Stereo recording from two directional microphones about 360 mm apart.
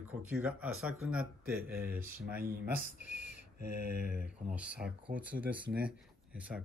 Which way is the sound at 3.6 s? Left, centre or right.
Right.